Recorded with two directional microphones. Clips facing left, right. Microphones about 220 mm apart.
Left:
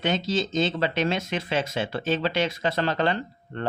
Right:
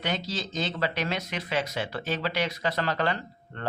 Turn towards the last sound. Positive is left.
turn(degrees=25)  # may be behind; listen again after turning